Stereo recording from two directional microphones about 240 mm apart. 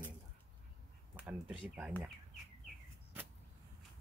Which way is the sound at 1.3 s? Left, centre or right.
Centre.